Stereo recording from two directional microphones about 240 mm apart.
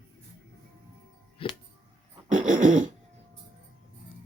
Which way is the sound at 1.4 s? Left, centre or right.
Left.